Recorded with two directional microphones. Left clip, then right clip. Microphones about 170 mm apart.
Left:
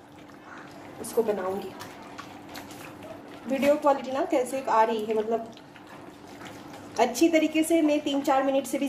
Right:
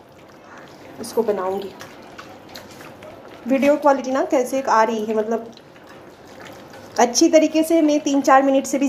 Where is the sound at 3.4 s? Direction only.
30° right (ahead or behind).